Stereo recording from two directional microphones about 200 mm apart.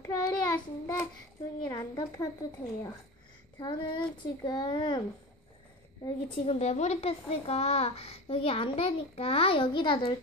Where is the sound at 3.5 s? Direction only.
20° left (ahead or behind).